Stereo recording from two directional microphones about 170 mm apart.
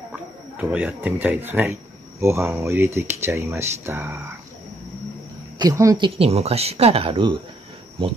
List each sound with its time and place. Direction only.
0.1 s speech: 5° right (ahead or behind)
5.6 s speech: 20° right (ahead or behind)